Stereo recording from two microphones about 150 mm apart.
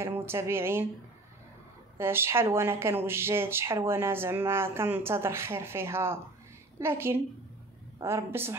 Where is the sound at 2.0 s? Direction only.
15° right (ahead or behind).